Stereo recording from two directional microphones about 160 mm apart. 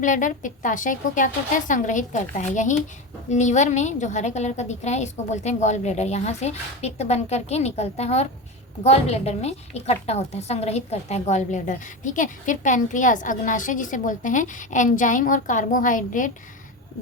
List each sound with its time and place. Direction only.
0.0 s a woman's voice: 55° left (ahead or behind)